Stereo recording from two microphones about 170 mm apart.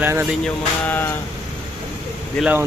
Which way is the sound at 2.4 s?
Centre (ahead or behind).